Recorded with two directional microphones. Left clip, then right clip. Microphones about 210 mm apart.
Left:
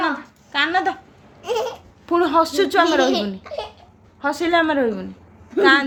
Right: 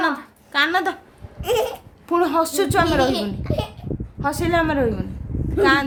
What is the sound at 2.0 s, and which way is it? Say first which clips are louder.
Speech: left 2 dB; 5° left (ahead or behind).